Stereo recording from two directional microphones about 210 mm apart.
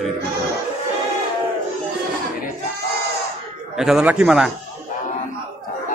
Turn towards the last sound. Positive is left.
turn(degrees=-5)  # may be behind; listen again after turning